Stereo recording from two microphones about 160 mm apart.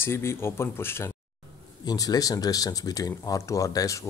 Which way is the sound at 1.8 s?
25° left (ahead or behind).